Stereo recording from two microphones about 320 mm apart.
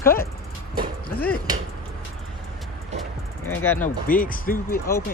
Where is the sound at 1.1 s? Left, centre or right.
Left.